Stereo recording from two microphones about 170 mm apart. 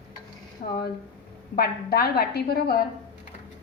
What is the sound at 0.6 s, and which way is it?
Speech, 55° left (ahead or behind).